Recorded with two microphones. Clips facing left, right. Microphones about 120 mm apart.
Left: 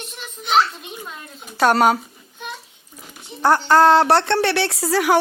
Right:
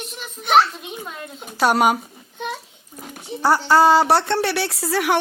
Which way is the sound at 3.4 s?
5° right (ahead or behind).